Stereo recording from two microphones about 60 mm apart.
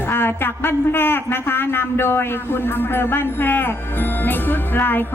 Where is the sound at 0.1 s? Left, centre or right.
Left.